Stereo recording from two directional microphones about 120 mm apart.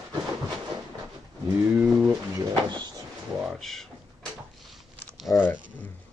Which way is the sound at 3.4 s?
Centre (ahead or behind).